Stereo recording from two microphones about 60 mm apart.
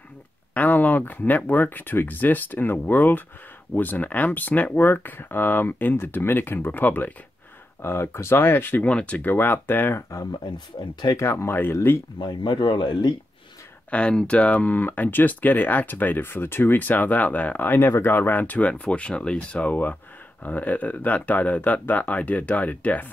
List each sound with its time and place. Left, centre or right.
0.6 s speech: left
7.8 s speech: left
8.8 s speech: left
9.2 s speech: left
11.1 s speech: left
13.8 s speech: centre
17.7 s speech: left